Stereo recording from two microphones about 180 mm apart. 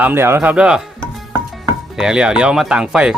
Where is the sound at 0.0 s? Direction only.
10° right (ahead or behind).